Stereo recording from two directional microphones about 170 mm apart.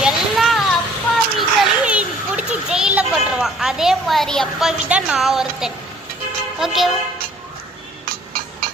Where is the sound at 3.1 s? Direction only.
5° right (ahead or behind).